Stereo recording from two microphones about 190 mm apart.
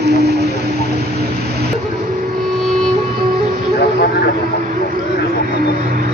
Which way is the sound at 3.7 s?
65° left (ahead or behind).